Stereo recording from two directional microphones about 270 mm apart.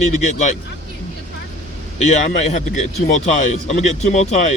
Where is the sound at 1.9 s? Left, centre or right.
Left.